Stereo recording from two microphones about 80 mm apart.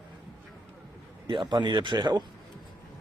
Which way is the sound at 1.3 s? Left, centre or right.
Right.